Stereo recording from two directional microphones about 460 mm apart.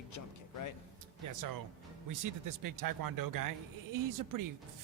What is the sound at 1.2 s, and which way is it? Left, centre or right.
Speech, right.